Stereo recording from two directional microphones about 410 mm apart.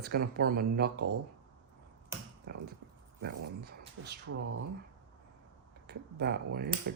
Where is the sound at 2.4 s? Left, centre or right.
Right.